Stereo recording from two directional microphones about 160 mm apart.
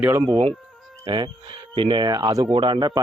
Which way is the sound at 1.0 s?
30° right (ahead or behind).